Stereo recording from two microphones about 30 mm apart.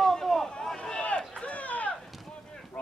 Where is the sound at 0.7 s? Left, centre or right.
Left.